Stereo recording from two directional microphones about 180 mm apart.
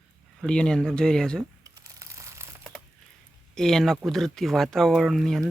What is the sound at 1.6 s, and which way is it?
Crumpling, 15° right (ahead or behind).